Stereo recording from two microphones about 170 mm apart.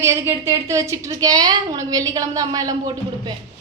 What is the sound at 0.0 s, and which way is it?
A woman's voice, 15° right (ahead or behind).